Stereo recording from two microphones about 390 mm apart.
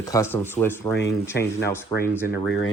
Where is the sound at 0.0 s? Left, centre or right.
Centre.